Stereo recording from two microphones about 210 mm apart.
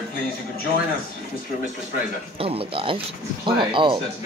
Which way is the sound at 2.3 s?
25° right (ahead or behind).